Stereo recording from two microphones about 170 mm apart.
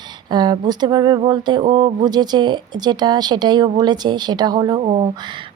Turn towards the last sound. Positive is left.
turn(degrees=-35)  # may be behind; listen again after turning